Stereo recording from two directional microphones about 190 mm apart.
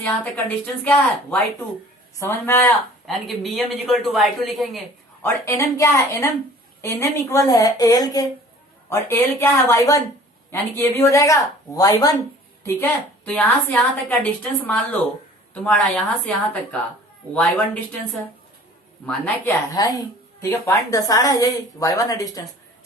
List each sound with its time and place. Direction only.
0.0 s a woman's voice: 10° left (ahead or behind)
5.2 s a woman's voice: 15° left (ahead or behind)
12.6 s a woman's voice: 10° left (ahead or behind)
19.0 s a woman's voice: 5° left (ahead or behind)
19.7 s a woman's voice: 20° left (ahead or behind)